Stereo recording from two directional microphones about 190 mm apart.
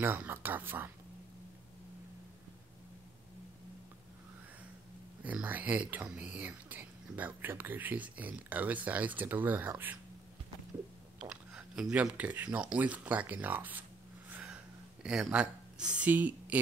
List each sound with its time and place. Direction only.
0.0 s speech: 10° right (ahead or behind)
5.2 s speech: 10° right (ahead or behind)
11.1 s speech: 5° right (ahead or behind)
14.3 s a sound: 5° right (ahead or behind)
15.3 s speech: 5° right (ahead or behind)